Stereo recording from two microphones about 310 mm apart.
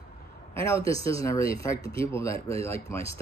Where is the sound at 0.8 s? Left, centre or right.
Centre.